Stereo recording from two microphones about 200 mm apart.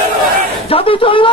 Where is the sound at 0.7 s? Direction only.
25° left (ahead or behind).